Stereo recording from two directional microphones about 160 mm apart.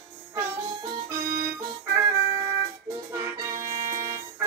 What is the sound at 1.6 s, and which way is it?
Music, 20° right (ahead or behind).